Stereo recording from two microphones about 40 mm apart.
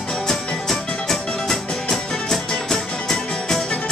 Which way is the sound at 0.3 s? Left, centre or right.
Centre.